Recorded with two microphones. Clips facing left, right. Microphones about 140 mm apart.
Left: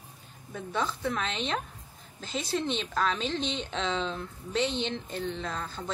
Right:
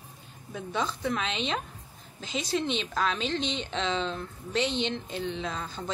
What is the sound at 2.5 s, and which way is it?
Speech, 5° right (ahead or behind).